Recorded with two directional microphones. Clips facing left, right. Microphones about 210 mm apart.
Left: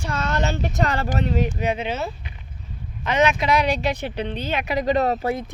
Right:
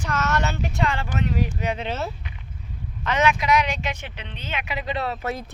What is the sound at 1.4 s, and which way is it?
Speech, 15° left (ahead or behind).